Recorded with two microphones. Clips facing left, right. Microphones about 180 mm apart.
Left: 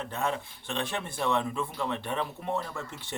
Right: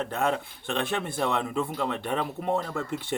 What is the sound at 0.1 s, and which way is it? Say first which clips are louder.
Speech: right 4 dB; 60° right (ahead or behind).